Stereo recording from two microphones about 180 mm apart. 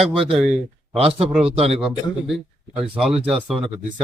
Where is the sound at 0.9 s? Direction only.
35° right (ahead or behind).